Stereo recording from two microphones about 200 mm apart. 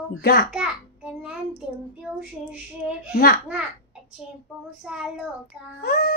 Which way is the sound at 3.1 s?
50° left (ahead or behind).